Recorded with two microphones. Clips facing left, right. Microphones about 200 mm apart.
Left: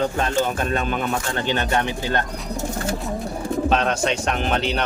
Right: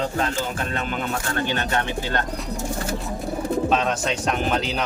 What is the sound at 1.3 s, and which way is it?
Speech, 20° left (ahead or behind).